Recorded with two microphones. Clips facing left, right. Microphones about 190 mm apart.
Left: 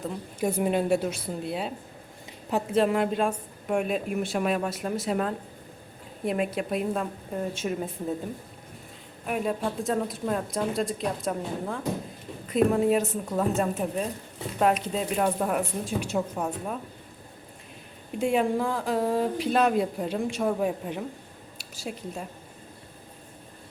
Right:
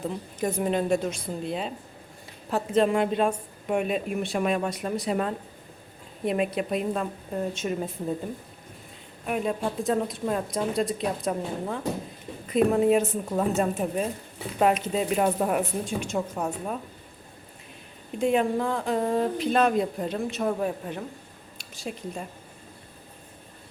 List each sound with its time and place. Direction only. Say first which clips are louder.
0.3 s speech: left 1 dB; 10° left (ahead or behind)
2.5 s speech: right 1 dB; 15° left (ahead or behind)
2.8 s speech: right 1 dB; centre (ahead or behind)
9.2 s speech: right 1 dB; centre (ahead or behind)
18.2 s speech: right 1 dB; 10° left (ahead or behind)